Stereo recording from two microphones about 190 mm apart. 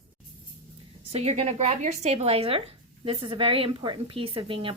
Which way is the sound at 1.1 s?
35° right (ahead or behind).